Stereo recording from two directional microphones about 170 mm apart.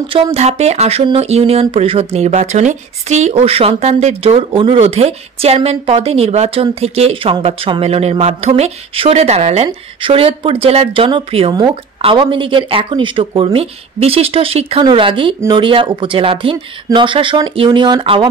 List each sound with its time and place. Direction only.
0.1 s speech: 35° right (ahead or behind)